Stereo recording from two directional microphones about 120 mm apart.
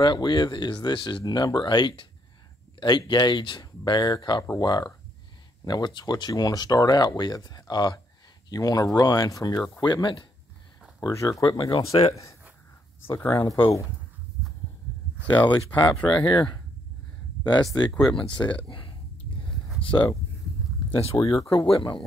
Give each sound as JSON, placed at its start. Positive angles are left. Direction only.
{"t": 0.0, "sound": "speech", "side_deg": 40}
{"t": 11.0, "sound": "speech", "side_deg": 25}
{"t": 15.2, "sound": "speech", "side_deg": 40}
{"t": 18.7, "sound": "a sound", "side_deg": 45}
{"t": 19.8, "sound": "speech", "side_deg": 45}
{"t": 21.2, "sound": "speech", "side_deg": 25}
{"t": 21.5, "sound": "speech", "side_deg": 50}